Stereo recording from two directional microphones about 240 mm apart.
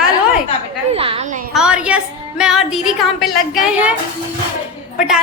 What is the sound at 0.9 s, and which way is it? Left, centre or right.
Speech, right.